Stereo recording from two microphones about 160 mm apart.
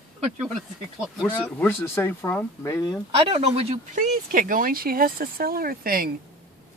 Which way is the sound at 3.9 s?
55° right (ahead or behind).